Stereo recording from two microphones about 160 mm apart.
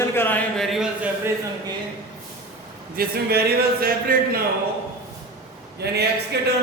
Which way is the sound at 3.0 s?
75° right (ahead or behind).